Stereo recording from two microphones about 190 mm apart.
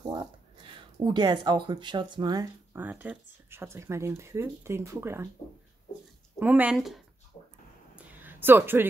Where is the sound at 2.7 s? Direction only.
10° right (ahead or behind).